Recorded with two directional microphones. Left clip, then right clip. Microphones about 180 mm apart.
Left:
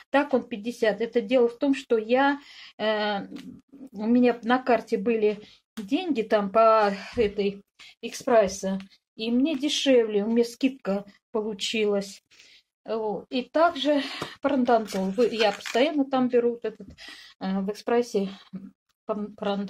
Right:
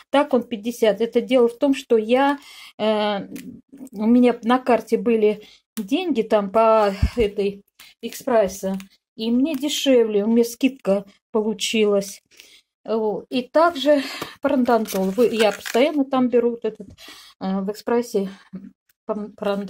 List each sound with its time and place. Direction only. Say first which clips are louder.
0.1 s speech: right 5 dB; 45° right (ahead or behind)
8.2 s speech: right 2 dB; 25° right (ahead or behind)
8.7 s speech: right 3 dB; 40° right (ahead or behind)